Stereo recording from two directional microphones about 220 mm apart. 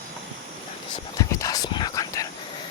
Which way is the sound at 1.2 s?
15° left (ahead or behind).